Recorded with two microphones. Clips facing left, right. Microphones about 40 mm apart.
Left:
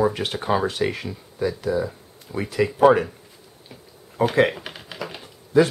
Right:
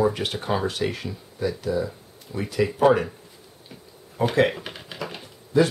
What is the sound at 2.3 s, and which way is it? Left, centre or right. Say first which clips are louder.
Speech: left 2 dB; left.